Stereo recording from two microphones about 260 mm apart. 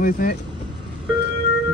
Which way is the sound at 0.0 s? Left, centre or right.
Left.